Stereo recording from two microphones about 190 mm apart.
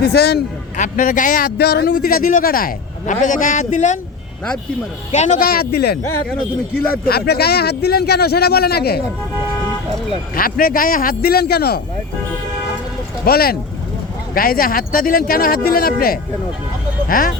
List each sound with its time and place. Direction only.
0.0 s a man's voice: 55° left (ahead or behind)
0.8 s speech: 40° left (ahead or behind)
5.1 s speech: 40° left (ahead or behind)
5.5 s a man's voice: 55° left (ahead or behind)
7.0 s a man's voice: 55° left (ahead or behind)
10.3 s speech: 50° left (ahead or behind)
13.2 s speech: 55° left (ahead or behind)